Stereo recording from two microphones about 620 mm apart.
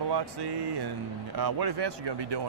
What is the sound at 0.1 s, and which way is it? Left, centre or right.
Speech, right.